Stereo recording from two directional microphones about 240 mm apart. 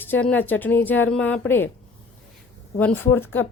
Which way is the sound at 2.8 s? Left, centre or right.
Centre.